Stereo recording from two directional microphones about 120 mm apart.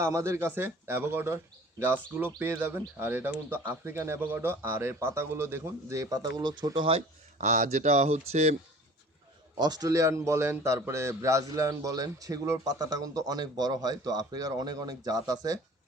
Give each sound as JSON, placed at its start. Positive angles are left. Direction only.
{"t": 0.0, "sound": "speech", "side_deg": -25}
{"t": 7.3, "sound": "speech", "side_deg": -85}
{"t": 9.6, "sound": "a man's voice", "side_deg": -35}